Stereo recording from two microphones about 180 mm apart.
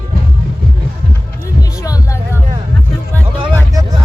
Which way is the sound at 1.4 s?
20° left (ahead or behind).